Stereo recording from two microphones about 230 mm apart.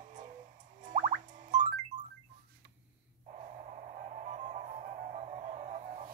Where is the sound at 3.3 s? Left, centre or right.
Right.